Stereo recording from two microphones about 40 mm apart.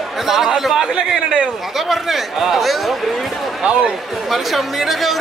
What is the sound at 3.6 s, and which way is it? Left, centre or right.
Speech, right.